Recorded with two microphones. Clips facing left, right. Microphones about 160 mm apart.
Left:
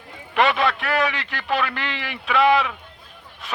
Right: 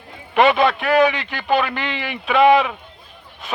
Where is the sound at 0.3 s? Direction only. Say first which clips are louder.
Right 5 dB; 20° right (ahead or behind).